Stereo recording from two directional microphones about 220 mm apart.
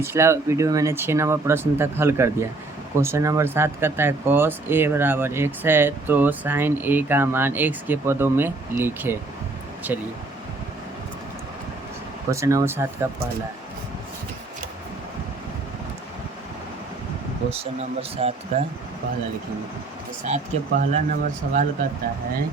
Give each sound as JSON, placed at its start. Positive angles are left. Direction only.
{"t": 0.0, "sound": "speech", "side_deg": -10}
{"t": 12.3, "sound": "speech", "side_deg": -15}
{"t": 17.5, "sound": "speech", "side_deg": -25}
{"t": 20.2, "sound": "speech", "side_deg": -30}